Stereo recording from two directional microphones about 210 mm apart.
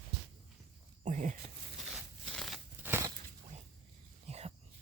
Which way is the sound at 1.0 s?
35° right (ahead or behind).